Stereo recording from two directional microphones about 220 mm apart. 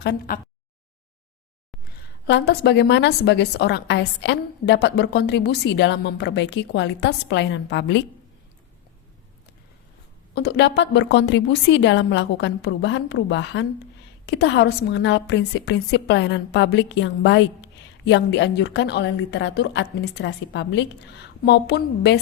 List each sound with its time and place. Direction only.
0.0 s a woman's voice: 50° left (ahead or behind)
2.2 s a woman's voice: 50° left (ahead or behind)
10.3 s a woman's voice: 50° left (ahead or behind)